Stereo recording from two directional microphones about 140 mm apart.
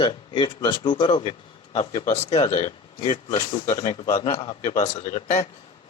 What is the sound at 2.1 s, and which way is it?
Speech, 50° left (ahead or behind).